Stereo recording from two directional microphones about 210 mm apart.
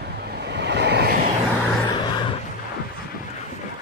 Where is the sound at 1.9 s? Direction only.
20° left (ahead or behind).